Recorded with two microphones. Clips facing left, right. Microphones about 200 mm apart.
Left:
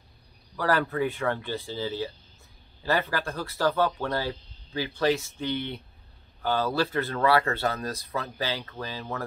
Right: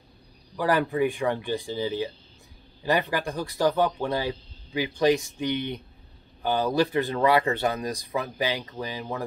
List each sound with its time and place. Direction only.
0.6 s speech: 15° right (ahead or behind)